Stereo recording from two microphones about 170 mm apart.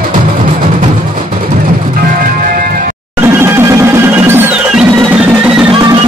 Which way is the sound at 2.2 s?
55° right (ahead or behind).